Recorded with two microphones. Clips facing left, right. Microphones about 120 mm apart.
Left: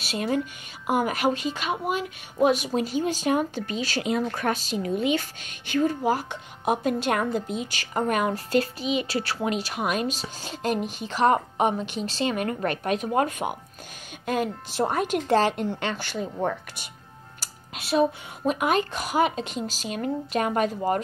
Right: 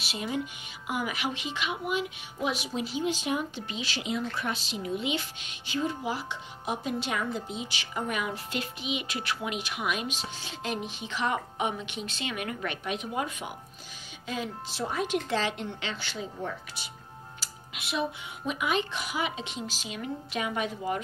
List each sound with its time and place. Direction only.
0.0 s a woman's voice: 50° left (ahead or behind)
16.3 s speech: 60° left (ahead or behind)
17.4 s a woman's voice: 40° left (ahead or behind)